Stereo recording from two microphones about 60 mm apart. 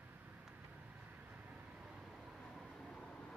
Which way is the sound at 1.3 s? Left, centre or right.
Right.